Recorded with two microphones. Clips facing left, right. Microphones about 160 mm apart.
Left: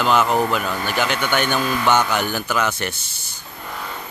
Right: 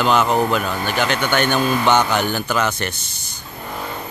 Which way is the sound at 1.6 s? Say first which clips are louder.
Right 3 dB; 25° right (ahead or behind).